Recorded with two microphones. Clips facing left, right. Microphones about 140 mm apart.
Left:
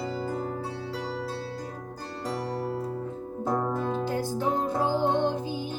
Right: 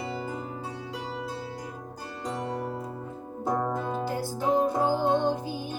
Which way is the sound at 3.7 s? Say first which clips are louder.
Left 2 dB; 15° right (ahead or behind).